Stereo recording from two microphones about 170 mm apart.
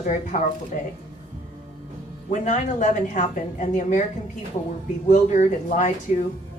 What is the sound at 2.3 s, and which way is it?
A woman's voice, 45° left (ahead or behind).